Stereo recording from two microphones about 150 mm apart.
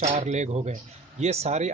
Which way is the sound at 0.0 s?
50° right (ahead or behind).